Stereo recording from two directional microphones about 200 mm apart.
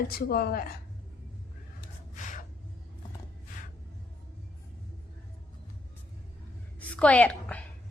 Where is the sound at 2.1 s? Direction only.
40° left (ahead or behind).